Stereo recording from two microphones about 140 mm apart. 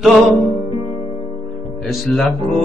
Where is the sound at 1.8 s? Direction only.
Centre (ahead or behind).